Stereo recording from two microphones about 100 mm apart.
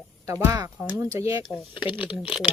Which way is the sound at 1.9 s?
60° left (ahead or behind).